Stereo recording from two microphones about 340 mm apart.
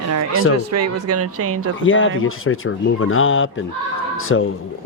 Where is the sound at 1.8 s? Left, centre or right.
Left.